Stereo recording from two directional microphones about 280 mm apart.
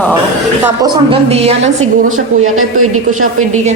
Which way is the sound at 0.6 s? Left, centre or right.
Centre.